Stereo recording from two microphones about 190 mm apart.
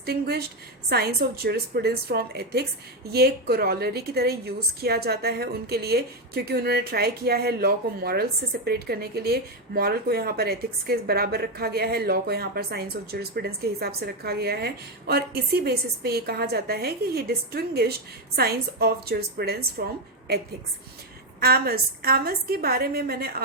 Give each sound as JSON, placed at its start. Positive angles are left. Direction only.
{"t": 0.0, "sound": "a woman's voice", "side_deg": -55}